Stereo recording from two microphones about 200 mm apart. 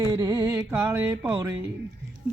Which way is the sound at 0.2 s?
20° right (ahead or behind).